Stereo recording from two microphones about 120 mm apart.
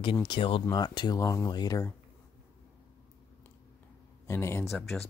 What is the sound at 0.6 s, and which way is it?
Speech, 35° left (ahead or behind).